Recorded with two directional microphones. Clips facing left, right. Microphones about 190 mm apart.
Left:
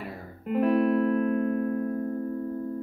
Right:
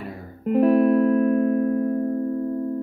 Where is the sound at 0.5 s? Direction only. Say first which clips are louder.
Right 6 dB; 40° right (ahead or behind).